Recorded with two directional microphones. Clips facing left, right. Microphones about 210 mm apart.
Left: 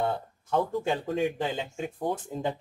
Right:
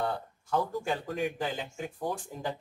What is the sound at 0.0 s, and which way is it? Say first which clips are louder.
Speech: left 3 dB; 25° left (ahead or behind).